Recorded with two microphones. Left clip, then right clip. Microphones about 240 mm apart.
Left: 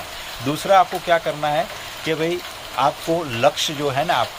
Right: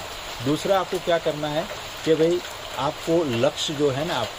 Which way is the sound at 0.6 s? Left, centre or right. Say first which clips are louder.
Left 8 dB; centre.